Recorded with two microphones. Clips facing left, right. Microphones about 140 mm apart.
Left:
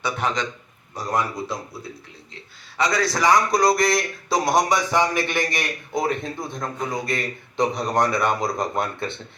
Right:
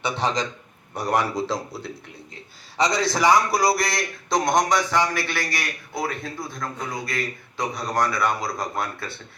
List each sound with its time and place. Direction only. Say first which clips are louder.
0.0 s a man's voice: even; 30° right (ahead or behind)
0.9 s speech: right 2 dB; 70° right (ahead or behind); by 1.9 s 85° right
3.1 s a man's voice: even; 10° right (ahead or behind); by 9.1 s 25° left (ahead or behind)